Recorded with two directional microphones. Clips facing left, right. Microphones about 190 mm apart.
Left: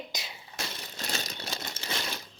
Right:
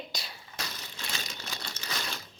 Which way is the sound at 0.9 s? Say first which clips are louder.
Left 4 dB; 40° left (ahead or behind).